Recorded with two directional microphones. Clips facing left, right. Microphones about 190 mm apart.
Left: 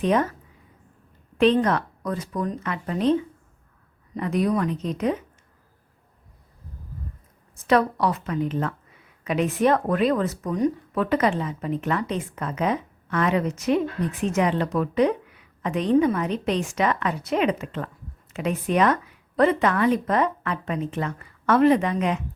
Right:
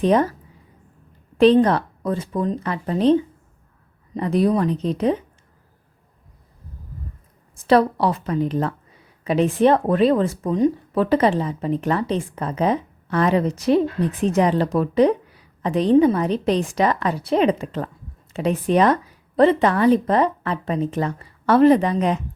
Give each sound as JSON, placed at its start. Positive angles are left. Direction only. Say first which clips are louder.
{"t": 0.0, "sound": "a woman's voice", "louder": "right 4 dB", "side_deg": -35}
{"t": 1.4, "sound": "a woman's voice", "louder": "right 5 dB", "side_deg": -30}
{"t": 7.5, "sound": "a woman's voice", "louder": "right 4 dB", "side_deg": -30}